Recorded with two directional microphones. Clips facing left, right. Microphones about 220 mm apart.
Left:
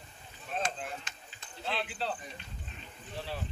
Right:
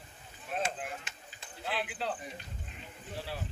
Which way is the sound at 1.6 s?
10° right (ahead or behind).